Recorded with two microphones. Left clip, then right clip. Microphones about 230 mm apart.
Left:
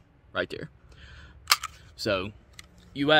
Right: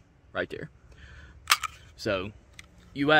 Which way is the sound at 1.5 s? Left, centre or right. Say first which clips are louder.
Even; centre.